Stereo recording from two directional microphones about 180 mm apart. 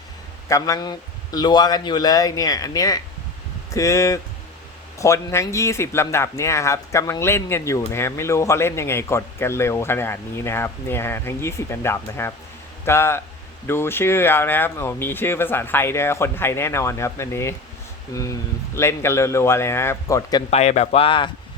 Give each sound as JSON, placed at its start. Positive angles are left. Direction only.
{"t": 0.4, "sound": "a man's voice", "side_deg": 20}
{"t": 20.5, "sound": "speech", "side_deg": 40}